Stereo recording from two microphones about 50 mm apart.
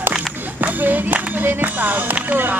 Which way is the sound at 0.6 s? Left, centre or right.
Right.